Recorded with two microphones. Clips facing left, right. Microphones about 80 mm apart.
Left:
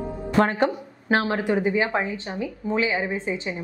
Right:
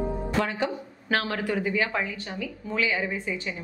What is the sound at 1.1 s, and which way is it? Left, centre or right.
A woman's voice, left.